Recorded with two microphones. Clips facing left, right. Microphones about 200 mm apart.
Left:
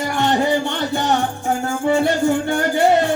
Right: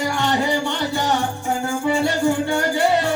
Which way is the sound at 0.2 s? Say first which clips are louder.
Left 5 dB; 50° left (ahead or behind).